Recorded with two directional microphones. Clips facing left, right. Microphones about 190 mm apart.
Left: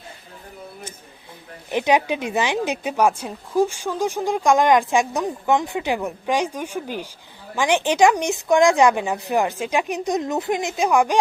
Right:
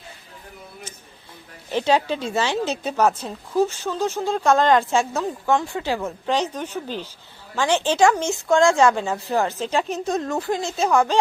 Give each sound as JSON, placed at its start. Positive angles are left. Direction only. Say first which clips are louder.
{"t": 1.7, "sound": "speech", "louder": "left 1 dB", "side_deg": 15}